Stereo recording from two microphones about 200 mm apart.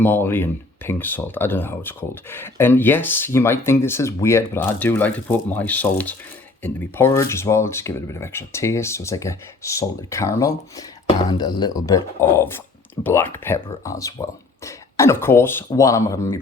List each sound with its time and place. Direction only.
0.0 s speech: 10° left (ahead or behind)